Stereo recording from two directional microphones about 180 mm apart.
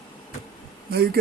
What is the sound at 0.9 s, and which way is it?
Speech, 60° right (ahead or behind).